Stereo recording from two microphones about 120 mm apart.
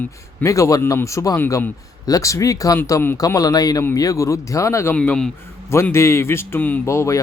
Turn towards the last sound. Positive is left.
turn(degrees=25)  # may be behind; listen again after turning